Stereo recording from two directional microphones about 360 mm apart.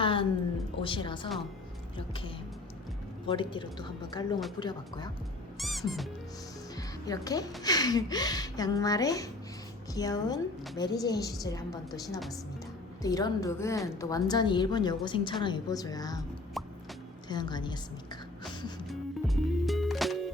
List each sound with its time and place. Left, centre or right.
0.0 s music: centre
0.8 s a woman's voice: centre
5.5 s music: centre
6.7 s a woman's voice: centre
16.6 s music: centre
17.2 s a woman's voice: centre
18.9 s music: centre